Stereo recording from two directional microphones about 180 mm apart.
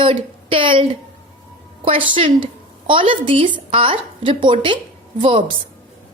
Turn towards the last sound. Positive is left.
turn(degrees=-30)  # may be behind; listen again after turning